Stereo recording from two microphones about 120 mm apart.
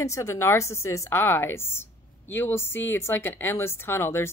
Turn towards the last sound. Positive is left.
turn(degrees=20)  # may be behind; listen again after turning